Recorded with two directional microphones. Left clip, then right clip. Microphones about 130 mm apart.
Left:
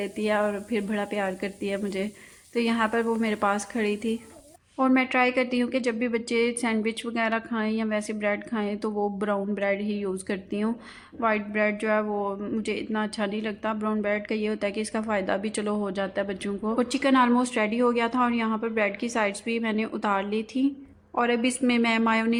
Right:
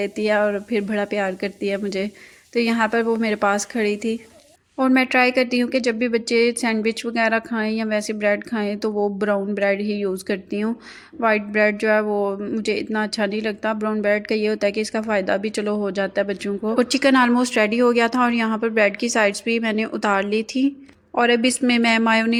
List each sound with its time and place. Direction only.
0.0 s speech: 35° right (ahead or behind)
12.4 s speech: 30° right (ahead or behind)